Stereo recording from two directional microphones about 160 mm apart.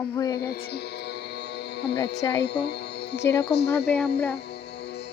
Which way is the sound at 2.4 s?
90° left.